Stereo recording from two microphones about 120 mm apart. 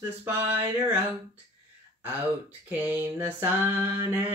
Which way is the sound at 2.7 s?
15° right (ahead or behind).